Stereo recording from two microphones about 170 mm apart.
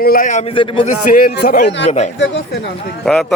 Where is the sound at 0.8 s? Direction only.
50° left (ahead or behind).